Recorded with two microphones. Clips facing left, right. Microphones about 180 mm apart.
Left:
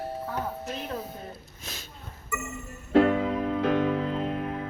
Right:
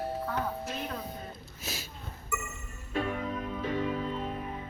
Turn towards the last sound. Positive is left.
turn(degrees=75)  # may be behind; listen again after turning